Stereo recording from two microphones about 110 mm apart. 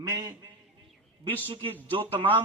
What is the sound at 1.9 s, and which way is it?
Speech, 50° right (ahead or behind).